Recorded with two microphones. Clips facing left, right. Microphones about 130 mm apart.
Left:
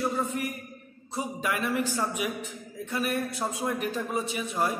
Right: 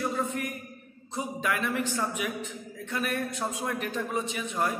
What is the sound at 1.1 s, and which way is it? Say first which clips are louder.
A man's voice: even; 10° left (ahead or behind).